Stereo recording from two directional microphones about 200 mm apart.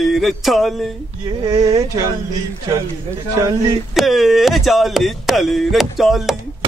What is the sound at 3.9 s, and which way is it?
Speech, centre (ahead or behind).